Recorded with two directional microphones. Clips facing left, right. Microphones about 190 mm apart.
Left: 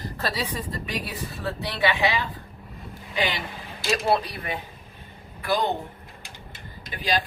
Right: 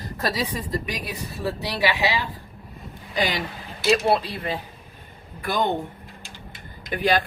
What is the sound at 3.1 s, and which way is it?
Speech, 40° right (ahead or behind).